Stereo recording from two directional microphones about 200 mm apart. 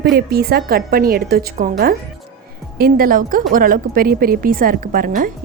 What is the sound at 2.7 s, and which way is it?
A woman's voice, 45° right (ahead or behind).